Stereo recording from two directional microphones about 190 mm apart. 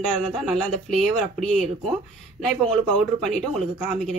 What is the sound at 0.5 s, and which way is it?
Speech, centre (ahead or behind).